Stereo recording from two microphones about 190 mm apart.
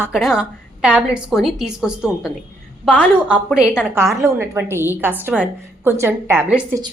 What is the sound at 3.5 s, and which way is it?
A woman's voice, 5° right (ahead or behind).